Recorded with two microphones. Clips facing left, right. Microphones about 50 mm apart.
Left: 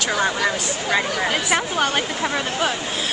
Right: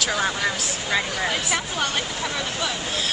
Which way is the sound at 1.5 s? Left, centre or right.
Left.